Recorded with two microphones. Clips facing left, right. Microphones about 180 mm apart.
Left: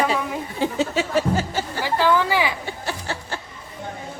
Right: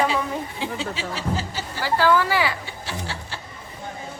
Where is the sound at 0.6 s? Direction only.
45° left (ahead or behind).